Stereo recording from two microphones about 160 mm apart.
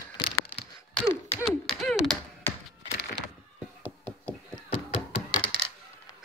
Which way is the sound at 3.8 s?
5° left (ahead or behind).